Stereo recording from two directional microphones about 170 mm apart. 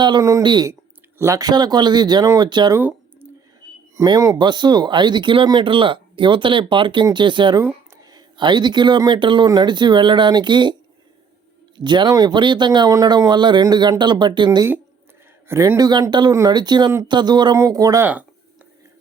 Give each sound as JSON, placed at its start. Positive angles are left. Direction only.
{"t": 0.0, "sound": "speech", "side_deg": -20}
{"t": 2.7, "sound": "a sound", "side_deg": -15}
{"t": 3.9, "sound": "speech", "side_deg": -20}
{"t": 11.8, "sound": "speech", "side_deg": -25}
{"t": 15.4, "sound": "speech", "side_deg": -15}